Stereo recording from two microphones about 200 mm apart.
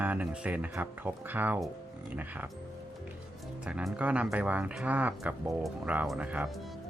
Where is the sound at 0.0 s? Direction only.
10° right (ahead or behind).